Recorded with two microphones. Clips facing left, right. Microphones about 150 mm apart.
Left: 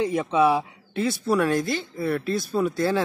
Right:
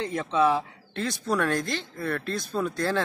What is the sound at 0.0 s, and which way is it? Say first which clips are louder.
Speech: left 3 dB; 10° left (ahead or behind).